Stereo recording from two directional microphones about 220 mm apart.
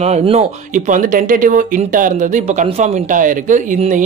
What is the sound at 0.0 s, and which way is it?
Speech, 30° right (ahead or behind).